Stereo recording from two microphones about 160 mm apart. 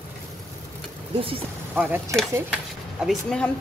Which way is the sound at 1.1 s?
35° right (ahead or behind).